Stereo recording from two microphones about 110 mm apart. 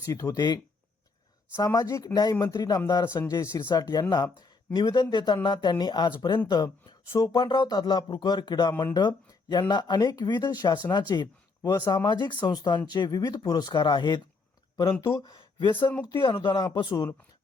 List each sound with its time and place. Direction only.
0.0 s speech: 30° left (ahead or behind)
1.6 s speech: 35° left (ahead or behind)
3.0 s speech: 25° left (ahead or behind)
3.7 s speech: 40° left (ahead or behind)
15.0 s speech: 30° left (ahead or behind)
15.7 s speech: 20° left (ahead or behind)
16.2 s speech: 45° left (ahead or behind)